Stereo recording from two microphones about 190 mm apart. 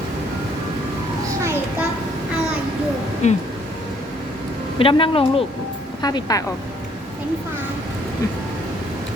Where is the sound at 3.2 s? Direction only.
35° left (ahead or behind).